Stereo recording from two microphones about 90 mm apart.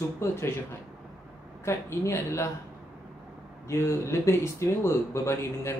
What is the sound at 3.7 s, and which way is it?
Speech, 30° left (ahead or behind).